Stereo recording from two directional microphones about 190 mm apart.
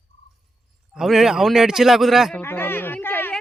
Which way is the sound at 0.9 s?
Centre (ahead or behind).